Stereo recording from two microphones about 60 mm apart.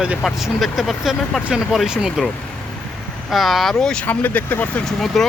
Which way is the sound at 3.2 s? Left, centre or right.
Centre.